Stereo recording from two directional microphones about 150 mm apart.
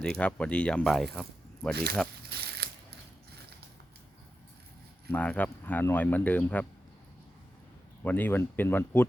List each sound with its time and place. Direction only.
0.0 s speech: 5° left (ahead or behind)
1.7 s speech: 90° right
2.3 s a sound: 90° right
5.1 s speech: 10° left (ahead or behind)
8.0 s speech: 10° left (ahead or behind)